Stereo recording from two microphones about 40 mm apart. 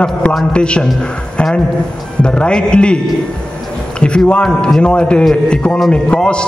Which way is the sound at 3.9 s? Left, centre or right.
Left.